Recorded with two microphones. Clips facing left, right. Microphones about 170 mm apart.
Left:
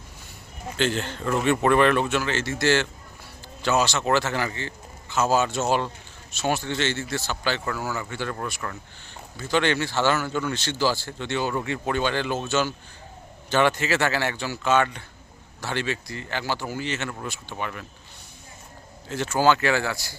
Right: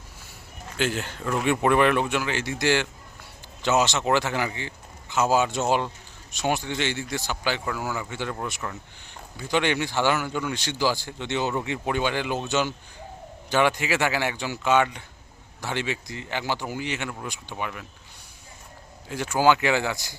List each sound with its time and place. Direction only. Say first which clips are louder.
0.8 s a man's voice: left 2 dB; 10° right (ahead or behind)
19.0 s a man's voice: even; 10° right (ahead or behind)